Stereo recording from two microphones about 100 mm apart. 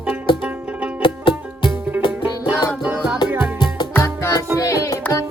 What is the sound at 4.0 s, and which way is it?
Music, 30° left (ahead or behind).